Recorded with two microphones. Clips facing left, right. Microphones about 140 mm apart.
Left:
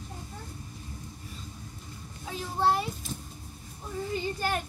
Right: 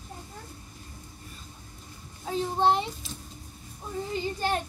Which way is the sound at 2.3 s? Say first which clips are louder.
Right 8 dB; 35° right (ahead or behind).